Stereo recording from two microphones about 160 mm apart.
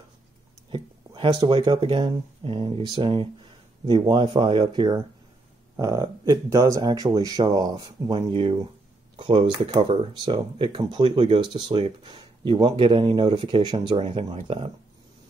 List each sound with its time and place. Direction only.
0.7 s speech: 30° right (ahead or behind)